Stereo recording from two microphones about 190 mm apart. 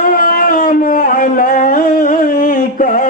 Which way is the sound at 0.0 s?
50° left (ahead or behind).